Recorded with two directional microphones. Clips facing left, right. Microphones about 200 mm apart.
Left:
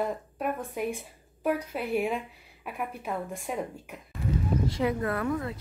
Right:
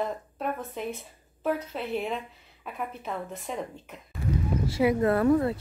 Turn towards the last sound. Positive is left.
turn(degrees=-35)  # may be behind; listen again after turning